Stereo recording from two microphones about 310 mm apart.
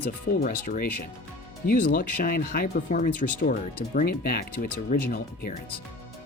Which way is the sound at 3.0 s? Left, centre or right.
Left.